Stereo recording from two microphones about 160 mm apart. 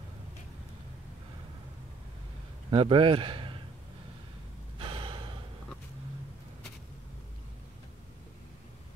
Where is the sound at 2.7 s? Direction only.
35° right (ahead or behind).